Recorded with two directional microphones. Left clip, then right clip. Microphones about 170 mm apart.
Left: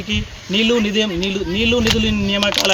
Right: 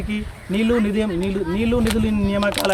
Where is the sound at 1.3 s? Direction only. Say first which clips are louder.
Left 3 dB; 30° right (ahead or behind).